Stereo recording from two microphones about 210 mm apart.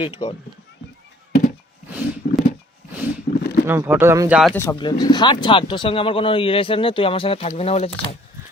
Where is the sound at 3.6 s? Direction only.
10° right (ahead or behind).